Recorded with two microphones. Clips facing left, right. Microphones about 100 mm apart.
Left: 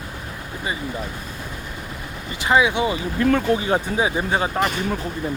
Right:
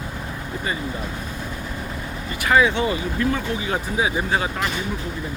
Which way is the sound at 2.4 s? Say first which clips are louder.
Even; 20° left (ahead or behind).